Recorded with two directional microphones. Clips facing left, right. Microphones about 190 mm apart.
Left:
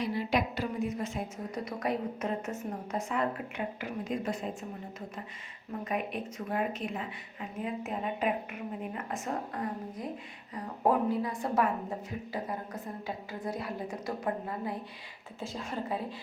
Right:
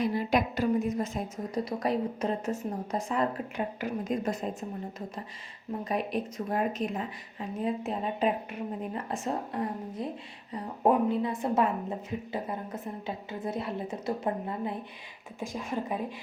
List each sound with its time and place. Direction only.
0.0 s a woman's voice: 45° right (ahead or behind)
5.8 s a woman's voice: 35° right (ahead or behind); by 16.1 s 15° right (ahead or behind)